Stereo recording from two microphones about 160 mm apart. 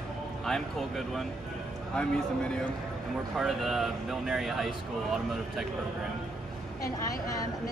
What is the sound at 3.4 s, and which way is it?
Speech, centre (ahead or behind).